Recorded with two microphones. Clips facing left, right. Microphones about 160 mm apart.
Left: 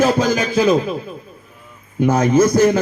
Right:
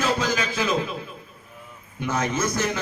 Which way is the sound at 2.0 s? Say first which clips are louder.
Left 12 dB; 35° left (ahead or behind).